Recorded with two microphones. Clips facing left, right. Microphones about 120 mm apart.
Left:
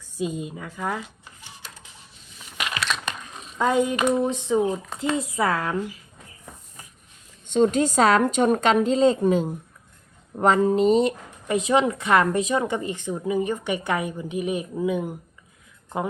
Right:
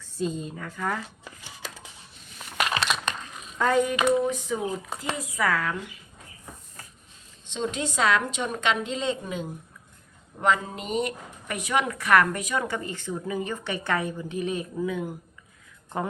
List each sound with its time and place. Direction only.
0.0 s speech: 10° left (ahead or behind)
1.6 s a sound: 90° right
2.6 s crumpling: 40° right (ahead or behind)
3.2 s a sound: 20° left (ahead or behind)
4.2 s speech: 25° left (ahead or behind)
7.5 s a woman's voice: 45° left (ahead or behind); by 15.1 s 20° left (ahead or behind)